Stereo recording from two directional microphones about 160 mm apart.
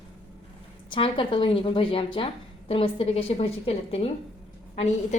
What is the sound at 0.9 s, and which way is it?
A woman's voice, 30° left (ahead or behind).